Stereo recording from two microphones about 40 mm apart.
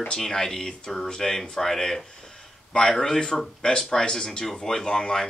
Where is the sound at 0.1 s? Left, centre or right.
Centre.